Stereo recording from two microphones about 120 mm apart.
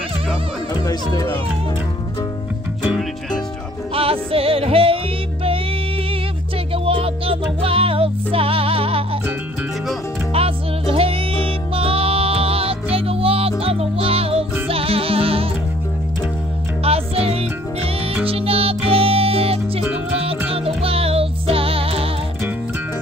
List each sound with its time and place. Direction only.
0.7 s speech: 30° left (ahead or behind)
3.0 s music: 5° left (ahead or behind)
3.9 s music: 50° right (ahead or behind)
6.7 s music: 50° right (ahead or behind)
10.3 s music: 55° right (ahead or behind)
16.8 s music: 55° right (ahead or behind)